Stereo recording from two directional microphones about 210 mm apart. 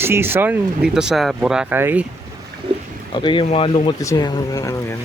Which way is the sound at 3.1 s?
25° left (ahead or behind).